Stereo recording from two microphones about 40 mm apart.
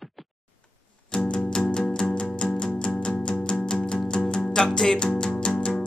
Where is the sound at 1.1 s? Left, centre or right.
Centre.